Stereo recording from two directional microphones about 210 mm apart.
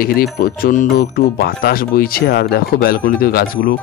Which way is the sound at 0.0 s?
45° left (ahead or behind).